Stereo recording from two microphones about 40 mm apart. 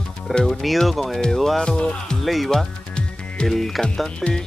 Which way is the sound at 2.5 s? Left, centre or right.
Left.